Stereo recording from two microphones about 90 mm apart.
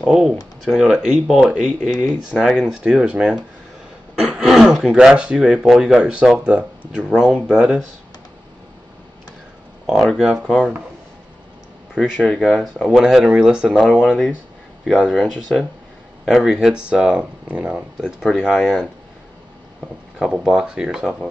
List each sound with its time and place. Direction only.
0.0 s speech: 10° right (ahead or behind)
1.8 s speech: 15° left (ahead or behind)
2.4 s speech: 10° right (ahead or behind)
9.8 s speech: 5° right (ahead or behind)
12.0 s speech: 10° left (ahead or behind)
12.4 s speech: centre (ahead or behind)
20.2 s speech: 10° right (ahead or behind)